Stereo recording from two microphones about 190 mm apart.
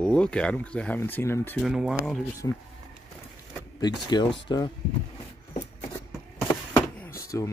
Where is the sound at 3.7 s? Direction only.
20° left (ahead or behind).